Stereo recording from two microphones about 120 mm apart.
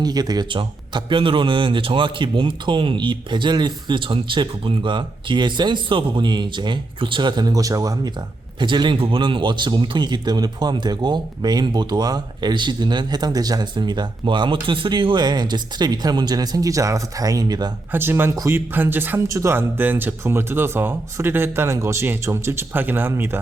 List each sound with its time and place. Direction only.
0.0 s a man's voice: 35° right (ahead or behind)
17.9 s speech: 20° right (ahead or behind)